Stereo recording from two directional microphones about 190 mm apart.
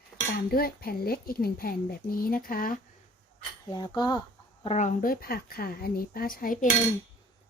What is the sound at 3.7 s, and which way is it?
Speech, 20° left (ahead or behind).